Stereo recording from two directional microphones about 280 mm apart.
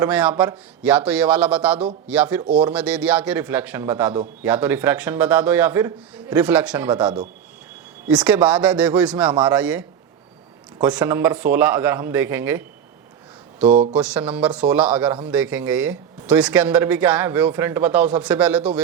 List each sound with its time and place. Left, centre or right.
0.0 s speech: centre
13.7 s speech: right
13.9 s speech: centre